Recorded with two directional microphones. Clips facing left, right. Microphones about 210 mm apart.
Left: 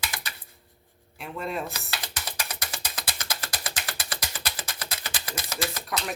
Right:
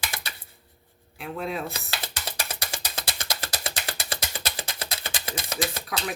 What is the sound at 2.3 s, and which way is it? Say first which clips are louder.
Music: right 2 dB; 25° right (ahead or behind).